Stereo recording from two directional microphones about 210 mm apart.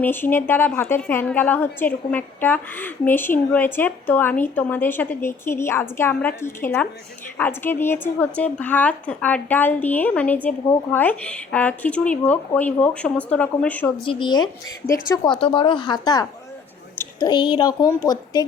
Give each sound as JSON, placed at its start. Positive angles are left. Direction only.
{"t": 0.0, "sound": "a woman's voice", "side_deg": 10}
{"t": 14.0, "sound": "a woman's voice", "side_deg": 25}